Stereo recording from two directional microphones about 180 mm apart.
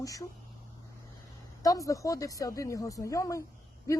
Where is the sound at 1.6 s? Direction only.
20° left (ahead or behind).